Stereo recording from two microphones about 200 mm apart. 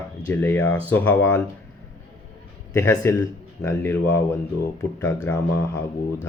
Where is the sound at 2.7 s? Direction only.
15° left (ahead or behind).